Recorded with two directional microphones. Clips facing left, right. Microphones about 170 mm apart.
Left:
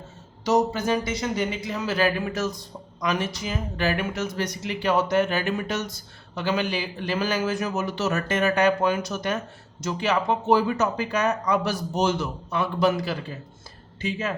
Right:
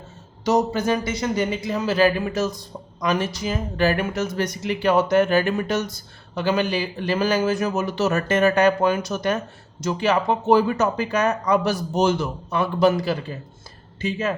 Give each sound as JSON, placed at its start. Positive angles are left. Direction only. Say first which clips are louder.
{"t": 0.4, "sound": "speech", "louder": "right 2 dB", "side_deg": -50}
{"t": 1.4, "sound": "speech", "louder": "right 4 dB", "side_deg": -35}